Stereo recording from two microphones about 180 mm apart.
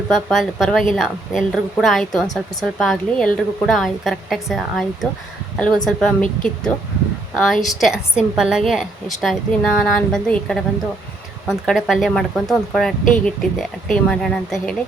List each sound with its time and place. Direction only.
0.1 s a woman's voice: centre (ahead or behind)